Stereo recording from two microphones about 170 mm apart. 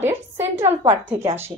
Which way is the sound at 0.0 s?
15° right (ahead or behind).